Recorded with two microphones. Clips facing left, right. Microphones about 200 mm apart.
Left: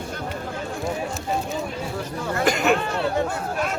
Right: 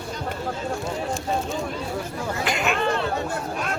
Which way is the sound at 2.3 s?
45° left (ahead or behind).